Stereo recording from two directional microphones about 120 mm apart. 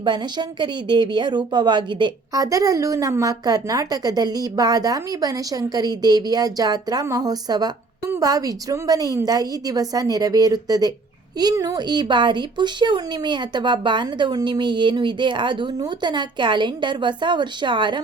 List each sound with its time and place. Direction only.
0.0 s speech: 35° right (ahead or behind)